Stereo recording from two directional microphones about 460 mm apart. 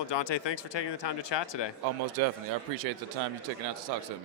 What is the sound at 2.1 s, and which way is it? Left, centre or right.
Speech, right.